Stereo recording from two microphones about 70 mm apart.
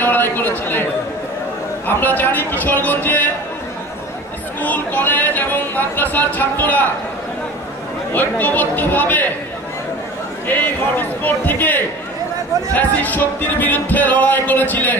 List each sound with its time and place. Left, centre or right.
0.0 s speech: left
1.9 s speech: left
4.6 s speech: left
8.1 s speech: left
10.5 s speech: left